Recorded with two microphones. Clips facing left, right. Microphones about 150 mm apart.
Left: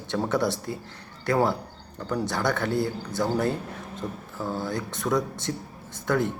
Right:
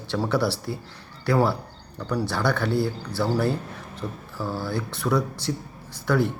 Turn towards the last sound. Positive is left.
turn(degrees=20)  # may be behind; listen again after turning